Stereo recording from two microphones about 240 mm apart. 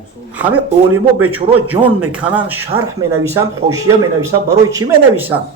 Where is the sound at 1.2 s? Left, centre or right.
Centre.